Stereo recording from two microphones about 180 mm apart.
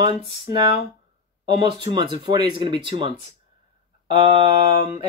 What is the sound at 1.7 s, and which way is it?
Speech, 25° right (ahead or behind).